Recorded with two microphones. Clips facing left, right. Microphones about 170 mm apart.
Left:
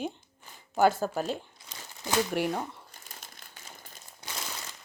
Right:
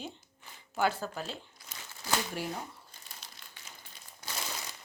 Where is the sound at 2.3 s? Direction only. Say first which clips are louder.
Left 8 dB; 65° left (ahead or behind).